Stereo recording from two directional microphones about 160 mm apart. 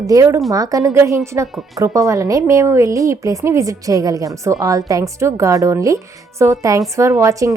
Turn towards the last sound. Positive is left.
turn(degrees=-20)  # may be behind; listen again after turning